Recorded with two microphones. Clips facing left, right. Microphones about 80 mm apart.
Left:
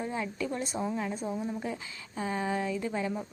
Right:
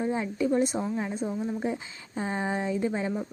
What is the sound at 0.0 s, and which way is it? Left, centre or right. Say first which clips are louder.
A woman's voice: right 6 dB; right.